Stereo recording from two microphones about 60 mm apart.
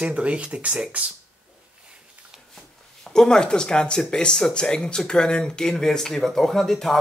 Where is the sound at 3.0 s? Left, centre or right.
Centre.